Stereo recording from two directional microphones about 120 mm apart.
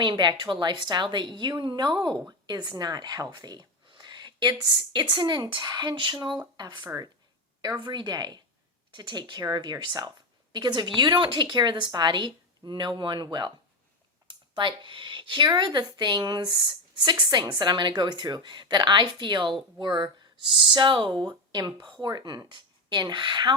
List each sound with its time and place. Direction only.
0.0 s a woman's voice: 40° right (ahead or behind)